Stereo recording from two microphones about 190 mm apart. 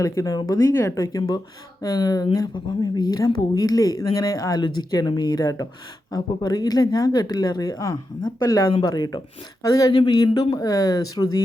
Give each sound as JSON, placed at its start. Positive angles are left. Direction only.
{"t": 0.0, "sound": "speech", "side_deg": 15}